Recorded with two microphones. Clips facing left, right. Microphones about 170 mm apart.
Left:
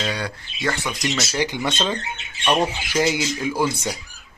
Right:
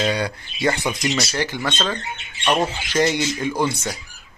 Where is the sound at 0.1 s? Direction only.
15° right (ahead or behind).